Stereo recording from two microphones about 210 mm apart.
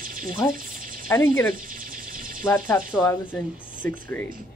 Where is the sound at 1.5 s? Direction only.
40° right (ahead or behind).